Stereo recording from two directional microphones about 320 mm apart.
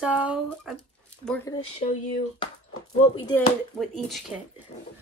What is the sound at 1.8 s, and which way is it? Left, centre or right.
Speech, left.